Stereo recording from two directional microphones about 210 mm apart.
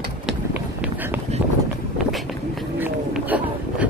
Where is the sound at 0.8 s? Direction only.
10° right (ahead or behind).